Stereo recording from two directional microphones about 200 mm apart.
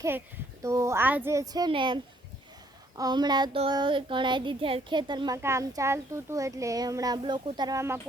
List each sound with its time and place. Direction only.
0.6 s speech: 15° right (ahead or behind)
3.0 s a child's voice: 20° right (ahead or behind)